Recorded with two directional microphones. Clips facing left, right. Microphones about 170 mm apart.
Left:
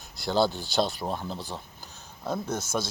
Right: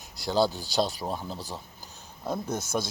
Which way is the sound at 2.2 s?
20° right (ahead or behind).